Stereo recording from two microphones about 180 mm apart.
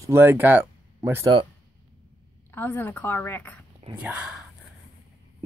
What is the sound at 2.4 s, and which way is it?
A woman's voice, 10° left (ahead or behind).